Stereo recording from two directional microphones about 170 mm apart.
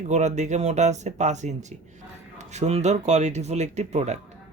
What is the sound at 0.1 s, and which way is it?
Speech, 40° right (ahead or behind).